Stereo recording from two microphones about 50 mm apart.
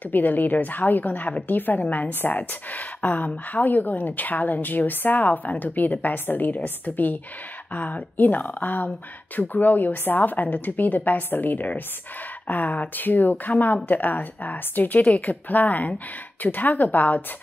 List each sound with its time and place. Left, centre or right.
0.1 s a woman's voice: left